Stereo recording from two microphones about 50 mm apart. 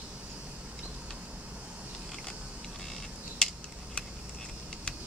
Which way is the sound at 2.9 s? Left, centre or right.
Centre.